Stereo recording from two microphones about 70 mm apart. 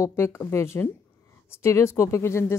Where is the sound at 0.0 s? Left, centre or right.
Left.